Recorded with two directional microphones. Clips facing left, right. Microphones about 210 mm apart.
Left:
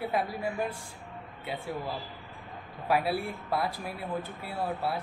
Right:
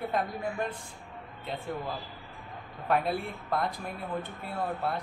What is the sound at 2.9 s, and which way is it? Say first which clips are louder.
Speech: even; 5° left (ahead or behind).